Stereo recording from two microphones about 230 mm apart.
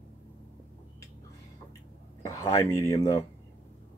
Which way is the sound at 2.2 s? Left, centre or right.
Centre.